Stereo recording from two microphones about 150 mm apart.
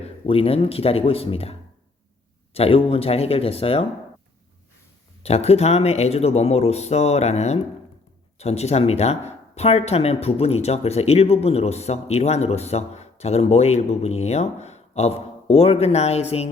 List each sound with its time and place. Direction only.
0.0 s speech: 40° left (ahead or behind)
5.2 s speech: 45° left (ahead or behind)